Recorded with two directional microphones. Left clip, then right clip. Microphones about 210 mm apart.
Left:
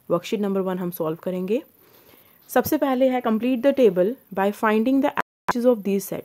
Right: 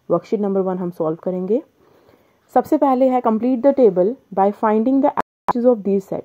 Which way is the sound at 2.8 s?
10° left (ahead or behind).